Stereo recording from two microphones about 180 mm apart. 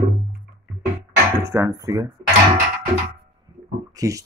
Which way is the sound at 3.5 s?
25° right (ahead or behind).